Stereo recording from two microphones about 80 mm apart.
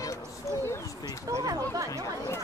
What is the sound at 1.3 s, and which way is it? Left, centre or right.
Speech, right.